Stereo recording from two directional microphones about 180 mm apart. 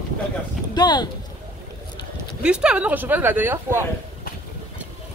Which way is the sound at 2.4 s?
5° right (ahead or behind).